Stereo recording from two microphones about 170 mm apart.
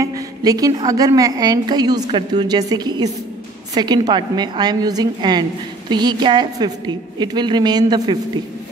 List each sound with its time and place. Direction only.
0.0 s a woman's voice: 20° right (ahead or behind)